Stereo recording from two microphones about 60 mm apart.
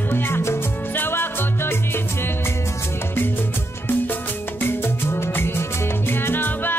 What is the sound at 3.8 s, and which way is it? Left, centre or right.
Music, left.